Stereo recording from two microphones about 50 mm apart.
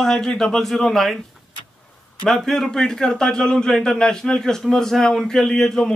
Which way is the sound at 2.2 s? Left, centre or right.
Centre.